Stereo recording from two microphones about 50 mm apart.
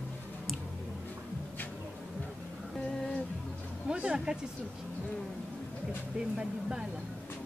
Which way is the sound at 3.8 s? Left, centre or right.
Centre.